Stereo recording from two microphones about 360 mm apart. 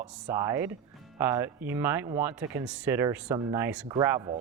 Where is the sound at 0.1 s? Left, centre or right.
Centre.